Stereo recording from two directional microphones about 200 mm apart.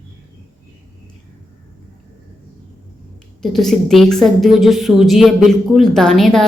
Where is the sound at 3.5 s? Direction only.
Centre (ahead or behind).